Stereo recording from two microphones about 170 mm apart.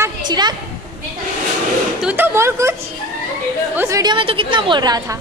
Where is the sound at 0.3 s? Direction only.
25° right (ahead or behind).